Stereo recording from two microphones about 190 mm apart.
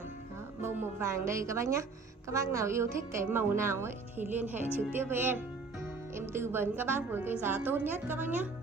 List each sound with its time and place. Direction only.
0.6 s a woman's voice: 10° right (ahead or behind)